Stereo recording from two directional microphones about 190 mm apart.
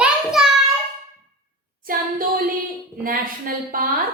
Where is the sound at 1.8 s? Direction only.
50° right (ahead or behind).